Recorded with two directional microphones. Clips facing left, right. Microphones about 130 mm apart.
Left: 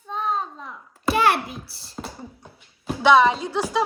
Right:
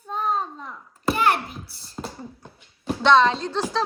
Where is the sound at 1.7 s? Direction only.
30° left (ahead or behind).